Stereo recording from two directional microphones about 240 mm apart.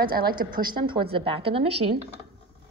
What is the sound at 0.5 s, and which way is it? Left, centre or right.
A woman's voice, centre.